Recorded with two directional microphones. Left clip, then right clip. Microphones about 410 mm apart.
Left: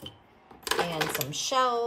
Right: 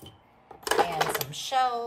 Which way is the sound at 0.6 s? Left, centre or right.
Centre.